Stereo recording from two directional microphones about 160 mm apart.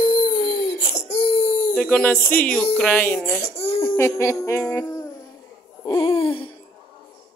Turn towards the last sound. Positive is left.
turn(degrees=35)  # may be behind; listen again after turning